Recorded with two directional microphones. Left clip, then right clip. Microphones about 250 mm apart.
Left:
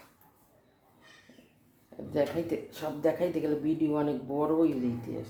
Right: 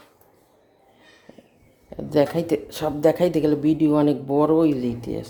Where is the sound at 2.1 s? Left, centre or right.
Right.